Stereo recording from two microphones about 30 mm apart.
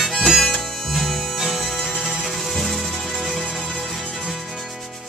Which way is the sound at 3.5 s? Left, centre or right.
Left.